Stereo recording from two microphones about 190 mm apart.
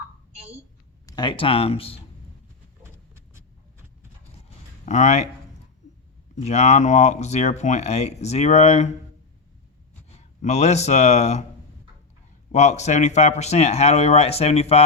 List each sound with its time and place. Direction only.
1.0 s speech: 25° left (ahead or behind)
2.8 s vehicle: 15° right (ahead or behind)
4.4 s a sound: 40° left (ahead or behind)
6.3 s speech: 35° left (ahead or behind)
10.1 s speech: 35° left (ahead or behind)
12.5 s speech: 35° left (ahead or behind)